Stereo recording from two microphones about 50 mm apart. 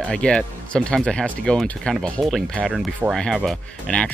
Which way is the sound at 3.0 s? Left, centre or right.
Right.